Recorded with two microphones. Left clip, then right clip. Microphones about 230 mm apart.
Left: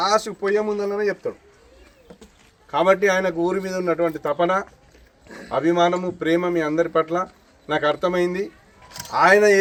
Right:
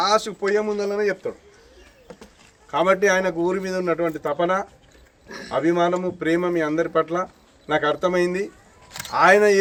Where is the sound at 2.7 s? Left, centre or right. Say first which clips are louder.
Left 1 dB; centre.